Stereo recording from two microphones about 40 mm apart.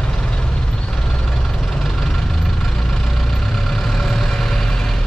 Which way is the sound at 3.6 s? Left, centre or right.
Centre.